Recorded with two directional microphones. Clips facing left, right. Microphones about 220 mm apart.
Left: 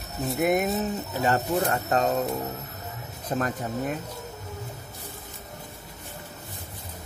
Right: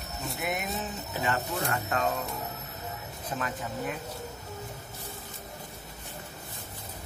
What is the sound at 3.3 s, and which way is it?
Speech, 45° left (ahead or behind).